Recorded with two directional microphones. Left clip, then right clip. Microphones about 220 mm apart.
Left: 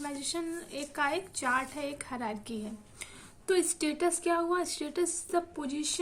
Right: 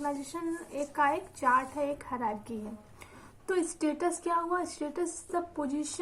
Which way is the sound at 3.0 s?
65° left (ahead or behind).